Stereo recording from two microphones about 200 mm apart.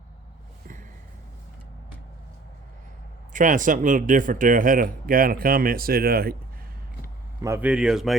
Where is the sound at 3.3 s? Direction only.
40° right (ahead or behind).